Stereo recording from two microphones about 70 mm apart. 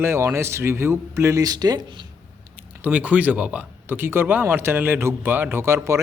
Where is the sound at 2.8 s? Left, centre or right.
Centre.